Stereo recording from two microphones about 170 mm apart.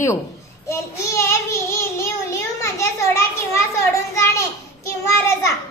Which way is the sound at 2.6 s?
20° left (ahead or behind).